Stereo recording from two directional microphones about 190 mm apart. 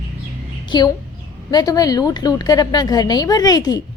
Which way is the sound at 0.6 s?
20° left (ahead or behind).